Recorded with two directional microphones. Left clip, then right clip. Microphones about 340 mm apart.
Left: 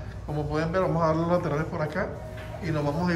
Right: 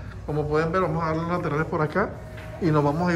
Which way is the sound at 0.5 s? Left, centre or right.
Centre.